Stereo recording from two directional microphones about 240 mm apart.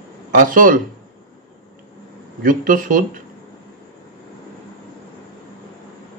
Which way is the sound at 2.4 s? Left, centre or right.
Right.